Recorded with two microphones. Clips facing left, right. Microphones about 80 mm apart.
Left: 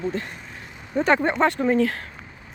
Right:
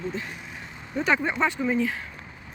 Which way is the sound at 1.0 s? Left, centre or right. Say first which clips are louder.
Left 4 dB; left.